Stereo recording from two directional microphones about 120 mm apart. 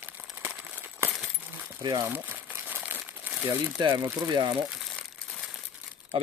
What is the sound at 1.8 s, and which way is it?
Speech, 35° right (ahead or behind).